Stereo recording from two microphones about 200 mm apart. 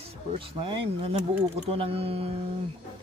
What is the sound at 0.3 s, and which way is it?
Speech, 30° right (ahead or behind).